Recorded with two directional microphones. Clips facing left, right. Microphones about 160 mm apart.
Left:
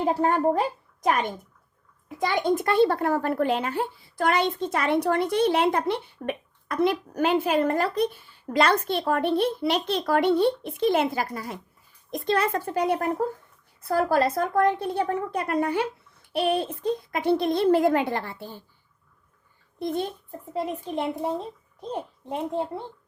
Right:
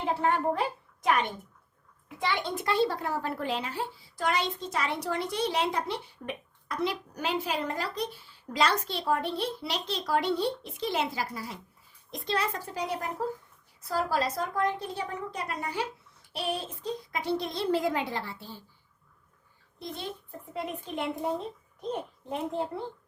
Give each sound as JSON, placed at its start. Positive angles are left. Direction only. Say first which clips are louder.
{"t": 0.0, "sound": "a woman's voice", "louder": "left 5 dB", "side_deg": 40}
{"t": 19.8, "sound": "a child's voice", "louder": "left 12 dB", "side_deg": 50}
{"t": 20.5, "sound": "a woman's voice", "louder": "left 6 dB", "side_deg": 35}